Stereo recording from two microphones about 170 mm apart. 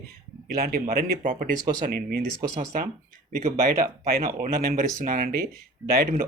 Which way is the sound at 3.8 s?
60° right (ahead or behind).